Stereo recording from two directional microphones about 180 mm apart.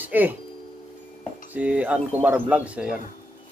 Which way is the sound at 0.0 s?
10° right (ahead or behind).